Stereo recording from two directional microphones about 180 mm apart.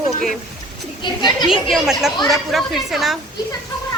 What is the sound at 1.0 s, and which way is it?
Speech, 25° left (ahead or behind).